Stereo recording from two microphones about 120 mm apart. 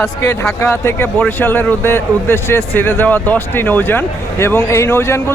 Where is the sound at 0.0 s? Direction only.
25° left (ahead or behind).